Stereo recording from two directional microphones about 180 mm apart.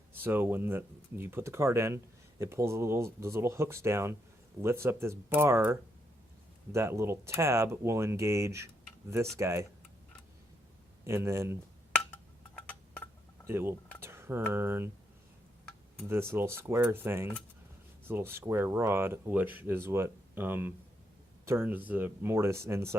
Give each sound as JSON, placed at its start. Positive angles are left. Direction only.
{"t": 0.2, "sound": "speech", "side_deg": -10}
{"t": 6.7, "sound": "speech", "side_deg": -15}
{"t": 11.0, "sound": "speech", "side_deg": -15}
{"t": 11.9, "sound": "glass", "side_deg": 10}
{"t": 13.5, "sound": "speech", "side_deg": -15}
{"t": 14.0, "sound": "a sound", "side_deg": -15}
{"t": 14.5, "sound": "speech", "side_deg": -10}
{"t": 16.0, "sound": "speech", "side_deg": -10}